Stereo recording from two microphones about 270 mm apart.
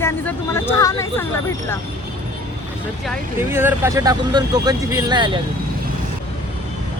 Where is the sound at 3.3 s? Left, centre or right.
Centre.